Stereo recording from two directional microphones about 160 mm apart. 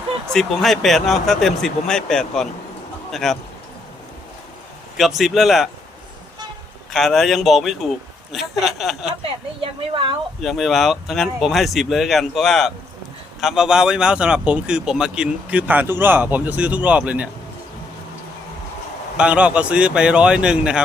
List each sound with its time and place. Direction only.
0.3 s a man's voice: centre (ahead or behind)
4.9 s speech: centre (ahead or behind)
6.9 s speech: centre (ahead or behind)
9.9 s speech: 35° right (ahead or behind)
10.4 s a man's voice: centre (ahead or behind)
19.1 s a man's voice: 5° right (ahead or behind)